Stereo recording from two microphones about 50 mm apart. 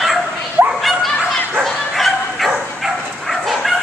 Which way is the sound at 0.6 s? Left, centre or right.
Right.